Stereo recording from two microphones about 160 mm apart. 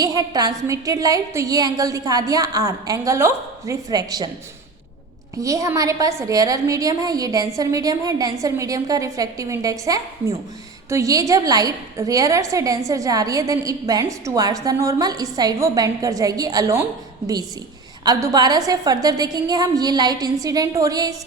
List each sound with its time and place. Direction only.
0.0 s a woman's voice: 25° right (ahead or behind)
5.4 s a woman's voice: 20° right (ahead or behind)
18.0 s a woman's voice: 20° right (ahead or behind)